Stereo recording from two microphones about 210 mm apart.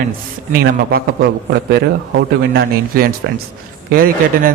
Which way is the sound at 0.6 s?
45° right (ahead or behind).